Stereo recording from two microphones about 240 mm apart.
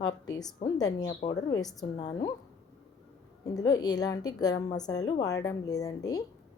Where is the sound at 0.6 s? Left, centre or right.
Centre.